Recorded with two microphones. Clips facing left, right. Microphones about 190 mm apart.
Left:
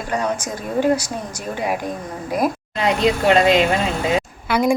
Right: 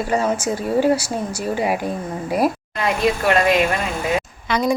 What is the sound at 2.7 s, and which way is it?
Speech, 20° left (ahead or behind).